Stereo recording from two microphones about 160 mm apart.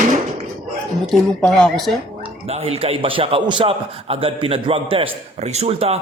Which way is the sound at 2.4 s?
40° right (ahead or behind).